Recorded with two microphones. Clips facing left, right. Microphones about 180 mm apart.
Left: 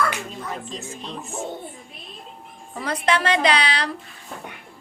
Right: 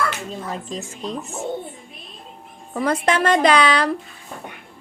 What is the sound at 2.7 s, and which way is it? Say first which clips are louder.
A woman's voice: right 3 dB; 50° right (ahead or behind).